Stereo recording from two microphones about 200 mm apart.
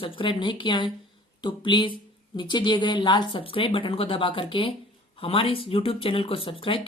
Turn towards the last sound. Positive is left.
turn(degrees=25)  # may be behind; listen again after turning